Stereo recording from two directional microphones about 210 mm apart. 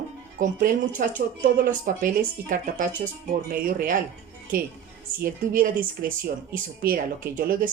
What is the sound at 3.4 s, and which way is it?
Speech, 40° right (ahead or behind).